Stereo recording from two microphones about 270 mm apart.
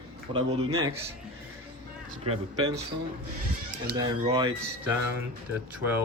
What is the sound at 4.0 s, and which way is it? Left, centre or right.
Speech, centre.